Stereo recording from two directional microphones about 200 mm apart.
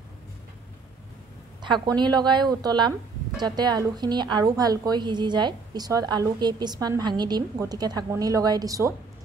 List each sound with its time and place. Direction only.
1.6 s a woman's voice: 20° right (ahead or behind)